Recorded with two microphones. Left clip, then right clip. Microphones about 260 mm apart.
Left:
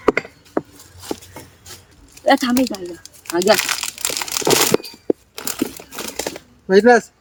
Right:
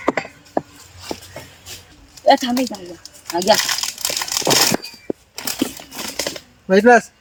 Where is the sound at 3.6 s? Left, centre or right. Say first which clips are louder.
Right 1 dB; left.